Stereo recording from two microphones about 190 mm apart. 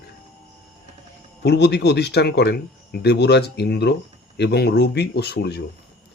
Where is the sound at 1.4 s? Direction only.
60° left (ahead or behind).